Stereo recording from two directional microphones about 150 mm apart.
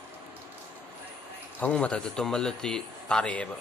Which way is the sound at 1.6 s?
10° left (ahead or behind).